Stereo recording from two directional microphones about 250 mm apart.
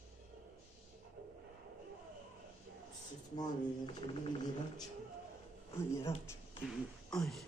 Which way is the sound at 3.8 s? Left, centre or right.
Left.